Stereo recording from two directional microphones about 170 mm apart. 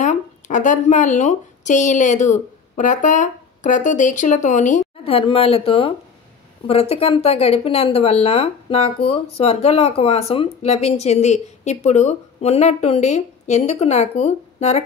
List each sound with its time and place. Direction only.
0.0 s speech: 45° left (ahead or behind)
5.0 s speech: 35° left (ahead or behind)